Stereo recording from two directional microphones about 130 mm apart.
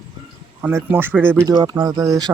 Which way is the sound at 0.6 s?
15° right (ahead or behind).